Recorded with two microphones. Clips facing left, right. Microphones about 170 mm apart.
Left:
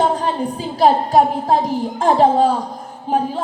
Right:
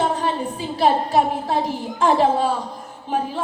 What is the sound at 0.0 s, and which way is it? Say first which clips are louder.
A woman's voice: left 3 dB; 40° left (ahead or behind).